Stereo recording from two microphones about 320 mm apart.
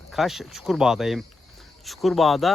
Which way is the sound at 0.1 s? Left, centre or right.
Centre.